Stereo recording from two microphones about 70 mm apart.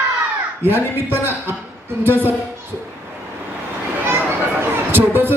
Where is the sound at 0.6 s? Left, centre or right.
Right.